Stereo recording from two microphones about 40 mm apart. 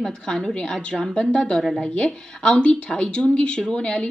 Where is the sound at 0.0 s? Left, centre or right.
Centre.